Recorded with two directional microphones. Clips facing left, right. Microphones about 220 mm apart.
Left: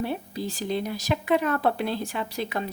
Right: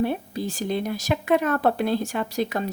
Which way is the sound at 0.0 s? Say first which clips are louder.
Right 4 dB; 50° right (ahead or behind).